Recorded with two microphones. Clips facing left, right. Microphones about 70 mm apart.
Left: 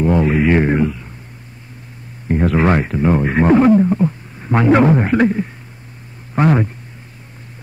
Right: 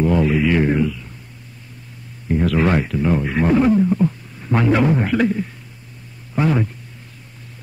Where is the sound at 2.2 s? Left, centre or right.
Left.